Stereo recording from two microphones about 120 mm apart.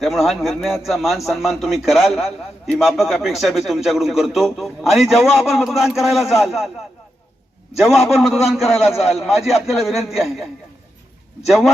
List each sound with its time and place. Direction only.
0.0 s a man's voice: centre (ahead or behind)
7.8 s a man's voice: centre (ahead or behind)